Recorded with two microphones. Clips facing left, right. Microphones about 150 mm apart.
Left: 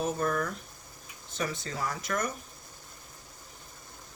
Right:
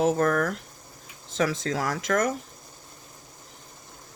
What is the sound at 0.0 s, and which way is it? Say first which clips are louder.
Speech: right 7 dB; 90° right.